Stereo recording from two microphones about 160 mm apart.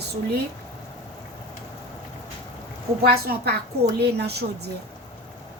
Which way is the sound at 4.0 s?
90° right.